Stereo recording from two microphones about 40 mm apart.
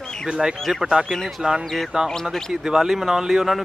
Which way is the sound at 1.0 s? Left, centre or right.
Centre.